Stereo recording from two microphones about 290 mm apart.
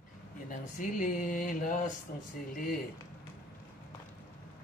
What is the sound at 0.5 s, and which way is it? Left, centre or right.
Speech, left.